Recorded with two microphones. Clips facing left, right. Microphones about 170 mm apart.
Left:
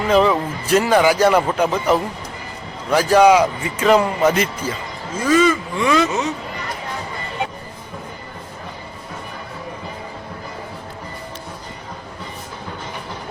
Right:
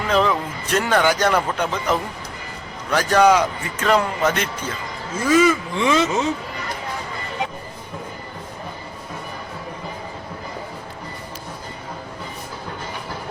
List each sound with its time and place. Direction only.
0.1 s a man's voice: 5° left (ahead or behind)
5.2 s speech: 10° right (ahead or behind)
5.8 s speech: 20° right (ahead or behind)